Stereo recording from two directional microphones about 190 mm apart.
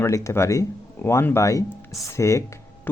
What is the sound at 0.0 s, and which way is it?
Speech, 15° left (ahead or behind).